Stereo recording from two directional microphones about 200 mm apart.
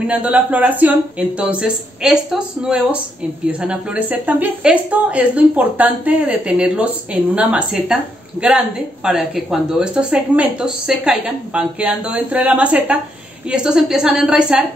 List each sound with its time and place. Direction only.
0.0 s a woman's voice: 5° right (ahead or behind)